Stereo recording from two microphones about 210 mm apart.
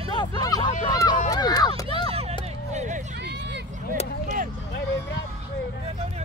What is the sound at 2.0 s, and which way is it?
Music, 30° right (ahead or behind).